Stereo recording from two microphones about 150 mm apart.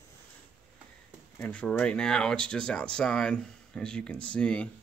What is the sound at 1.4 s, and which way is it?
Speech, 10° left (ahead or behind).